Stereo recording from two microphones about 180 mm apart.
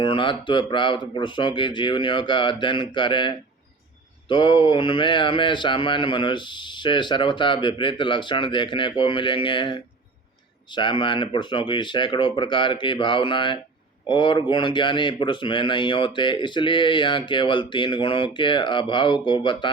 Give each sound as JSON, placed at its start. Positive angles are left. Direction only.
{"t": 0.0, "sound": "speech", "side_deg": 30}